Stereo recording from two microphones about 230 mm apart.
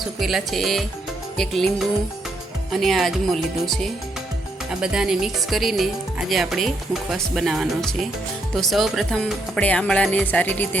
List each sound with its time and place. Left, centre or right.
0.2 s speech: centre